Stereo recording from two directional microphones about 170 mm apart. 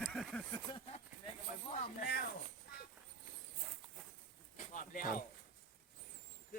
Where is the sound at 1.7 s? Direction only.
50° left (ahead or behind).